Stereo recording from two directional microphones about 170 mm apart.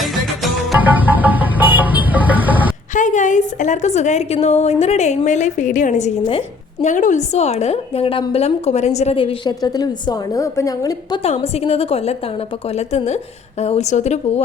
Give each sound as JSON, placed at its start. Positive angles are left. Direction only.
{"t": 0.0, "sound": "music", "side_deg": 0}
{"t": 2.9, "sound": "a woman's voice", "side_deg": 50}
{"t": 11.2, "sound": "a woman's voice", "side_deg": 35}